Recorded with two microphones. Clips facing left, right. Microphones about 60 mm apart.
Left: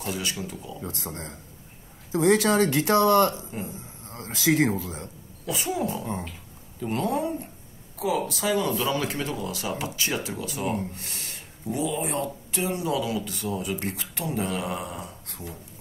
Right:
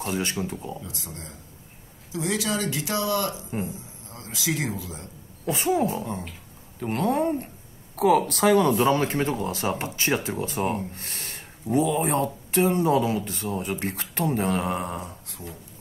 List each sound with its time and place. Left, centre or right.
0.0 s speech: right
0.7 s speech: left
5.4 s speech: right